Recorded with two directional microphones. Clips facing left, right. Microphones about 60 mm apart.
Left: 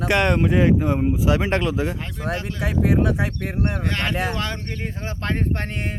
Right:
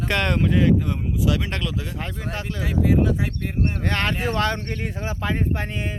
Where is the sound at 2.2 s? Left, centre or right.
Left.